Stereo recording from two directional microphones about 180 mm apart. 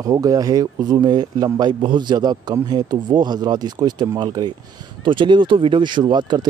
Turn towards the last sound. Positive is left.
turn(degrees=-25)  # may be behind; listen again after turning